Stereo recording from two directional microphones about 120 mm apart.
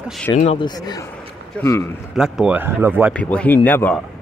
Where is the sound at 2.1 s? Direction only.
5° right (ahead or behind).